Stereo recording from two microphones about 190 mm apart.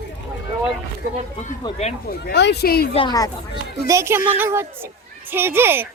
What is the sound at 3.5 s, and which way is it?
A woman's voice, 15° right (ahead or behind).